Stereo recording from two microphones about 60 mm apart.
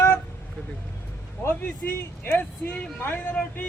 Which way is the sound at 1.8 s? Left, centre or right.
Left.